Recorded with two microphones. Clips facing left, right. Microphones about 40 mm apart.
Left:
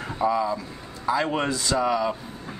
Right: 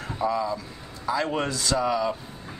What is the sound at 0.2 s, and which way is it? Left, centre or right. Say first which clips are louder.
Speech: left 3 dB; centre.